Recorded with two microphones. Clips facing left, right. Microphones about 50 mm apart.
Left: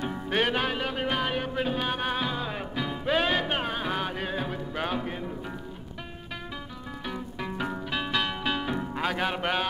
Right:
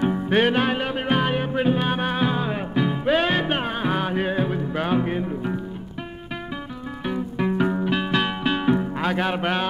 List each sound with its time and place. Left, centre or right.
0.0 s music: centre
7.1 s music: centre
9.0 s music: centre